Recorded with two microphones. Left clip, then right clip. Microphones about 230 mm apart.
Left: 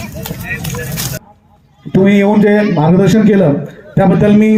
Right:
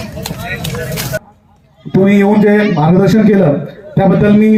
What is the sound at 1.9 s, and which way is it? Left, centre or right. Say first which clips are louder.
A man's voice: even; centre.